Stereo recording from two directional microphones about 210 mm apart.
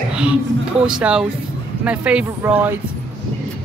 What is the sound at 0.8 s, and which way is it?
A man's voice, 5° right (ahead or behind).